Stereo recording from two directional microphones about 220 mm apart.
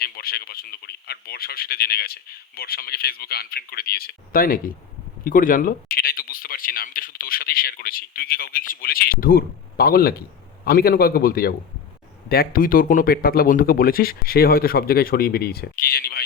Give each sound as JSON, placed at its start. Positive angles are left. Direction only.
{"t": 0.0, "sound": "speech", "side_deg": 45}